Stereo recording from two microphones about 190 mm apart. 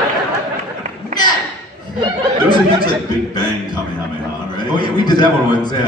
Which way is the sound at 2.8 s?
20° left (ahead or behind).